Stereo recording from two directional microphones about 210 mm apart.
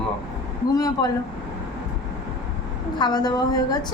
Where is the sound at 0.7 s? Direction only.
15° left (ahead or behind).